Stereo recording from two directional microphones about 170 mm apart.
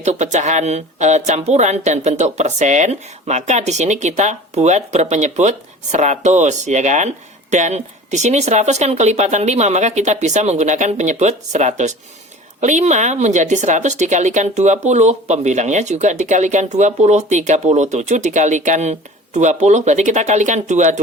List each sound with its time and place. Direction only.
0.0 s speech: 45° right (ahead or behind)